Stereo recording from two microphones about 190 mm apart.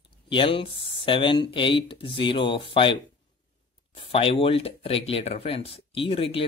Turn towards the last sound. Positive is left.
turn(degrees=30)  # may be behind; listen again after turning